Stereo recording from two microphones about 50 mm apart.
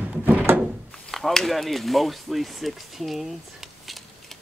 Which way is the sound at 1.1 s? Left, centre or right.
Centre.